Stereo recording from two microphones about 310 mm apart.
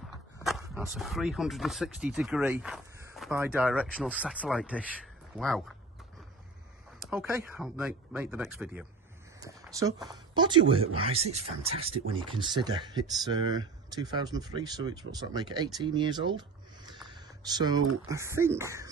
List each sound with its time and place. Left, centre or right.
0.4 s speech: centre
7.0 s speech: centre